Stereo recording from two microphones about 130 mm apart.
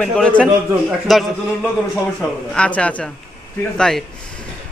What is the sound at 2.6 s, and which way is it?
A man's voice, 10° left (ahead or behind).